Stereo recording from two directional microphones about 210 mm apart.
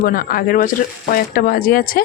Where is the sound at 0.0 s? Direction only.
45° left (ahead or behind).